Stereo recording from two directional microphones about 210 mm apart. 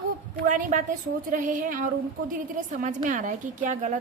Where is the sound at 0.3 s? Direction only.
40° right (ahead or behind).